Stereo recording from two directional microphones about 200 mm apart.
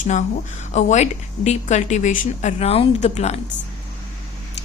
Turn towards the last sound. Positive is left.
turn(degrees=30)  # may be behind; listen again after turning